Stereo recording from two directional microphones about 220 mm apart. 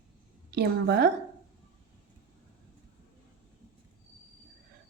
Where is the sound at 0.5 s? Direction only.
45° right (ahead or behind).